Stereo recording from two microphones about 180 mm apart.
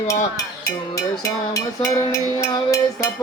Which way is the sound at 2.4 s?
20° left (ahead or behind).